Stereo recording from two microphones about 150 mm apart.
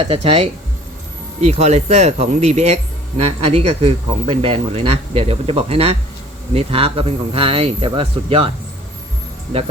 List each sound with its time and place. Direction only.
0.0 s a man's voice: 40° right (ahead or behind)